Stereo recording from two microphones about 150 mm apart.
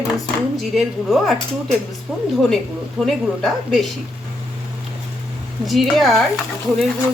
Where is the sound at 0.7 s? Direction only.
Centre (ahead or behind).